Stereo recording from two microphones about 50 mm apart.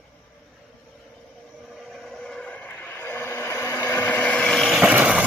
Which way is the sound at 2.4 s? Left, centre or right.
Left.